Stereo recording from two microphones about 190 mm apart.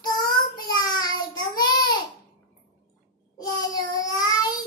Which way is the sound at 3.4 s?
20° left (ahead or behind).